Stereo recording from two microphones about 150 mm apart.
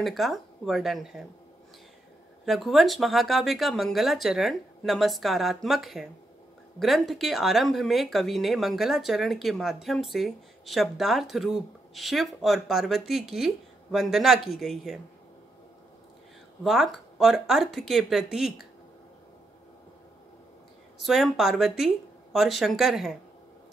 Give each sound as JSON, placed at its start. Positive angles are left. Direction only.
{"t": 0.0, "sound": "speech", "side_deg": 0}
{"t": 2.4, "sound": "speech", "side_deg": 0}
{"t": 16.6, "sound": "speech", "side_deg": 0}
{"t": 21.0, "sound": "speech", "side_deg": 0}